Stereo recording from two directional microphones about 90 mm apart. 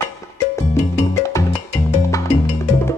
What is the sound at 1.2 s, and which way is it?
Music, 30° left (ahead or behind).